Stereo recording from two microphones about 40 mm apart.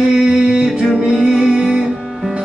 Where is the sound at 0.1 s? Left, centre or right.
Centre.